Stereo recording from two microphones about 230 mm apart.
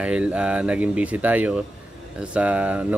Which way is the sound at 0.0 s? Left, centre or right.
Centre.